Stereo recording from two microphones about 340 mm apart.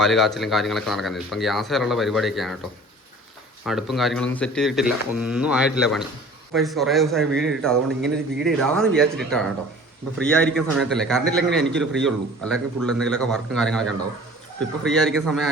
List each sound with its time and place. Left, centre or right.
0.0 s a man's voice: centre
3.7 s a man's voice: centre